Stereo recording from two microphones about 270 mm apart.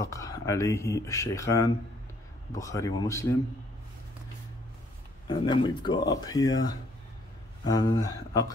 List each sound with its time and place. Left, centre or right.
0.0 s speech: centre
5.3 s speech: centre